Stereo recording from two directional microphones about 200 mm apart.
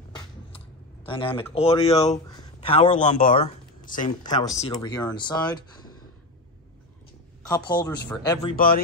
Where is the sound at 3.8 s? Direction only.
40° left (ahead or behind).